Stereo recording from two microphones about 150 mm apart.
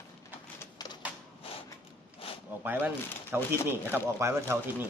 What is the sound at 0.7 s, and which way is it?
Typewriter, 25° left (ahead or behind).